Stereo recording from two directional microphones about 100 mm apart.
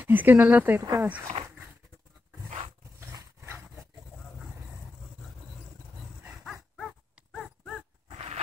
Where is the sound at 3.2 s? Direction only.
25° right (ahead or behind).